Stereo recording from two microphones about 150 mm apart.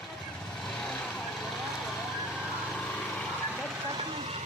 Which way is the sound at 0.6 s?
5° left (ahead or behind).